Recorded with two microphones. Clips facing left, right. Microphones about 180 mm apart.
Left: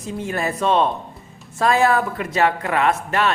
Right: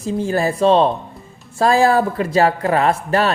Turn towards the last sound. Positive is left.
turn(degrees=-35)  # may be behind; listen again after turning